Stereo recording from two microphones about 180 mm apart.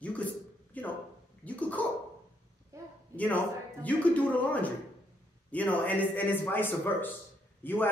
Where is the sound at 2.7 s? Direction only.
15° right (ahead or behind).